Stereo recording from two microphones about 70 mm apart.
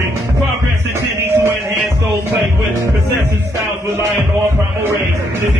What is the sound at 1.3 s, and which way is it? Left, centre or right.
Music, right.